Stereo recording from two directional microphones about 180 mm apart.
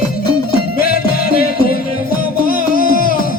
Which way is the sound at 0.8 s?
55° left (ahead or behind).